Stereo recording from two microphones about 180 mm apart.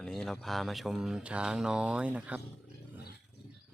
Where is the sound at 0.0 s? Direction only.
5° left (ahead or behind).